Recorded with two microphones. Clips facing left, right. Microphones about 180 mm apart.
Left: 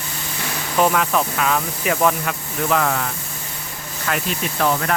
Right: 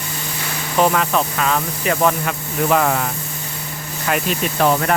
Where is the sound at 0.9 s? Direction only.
Centre (ahead or behind).